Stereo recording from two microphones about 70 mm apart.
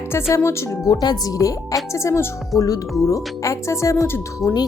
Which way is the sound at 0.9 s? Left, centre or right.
Left.